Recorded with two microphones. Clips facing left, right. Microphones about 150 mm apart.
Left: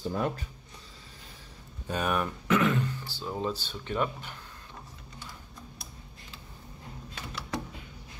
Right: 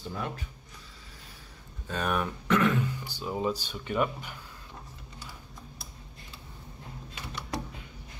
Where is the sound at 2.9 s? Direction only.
15° right (ahead or behind).